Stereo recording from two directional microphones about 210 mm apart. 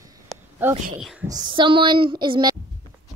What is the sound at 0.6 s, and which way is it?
Speech, 10° right (ahead or behind).